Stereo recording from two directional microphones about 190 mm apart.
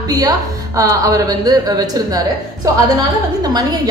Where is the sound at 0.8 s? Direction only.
15° right (ahead or behind).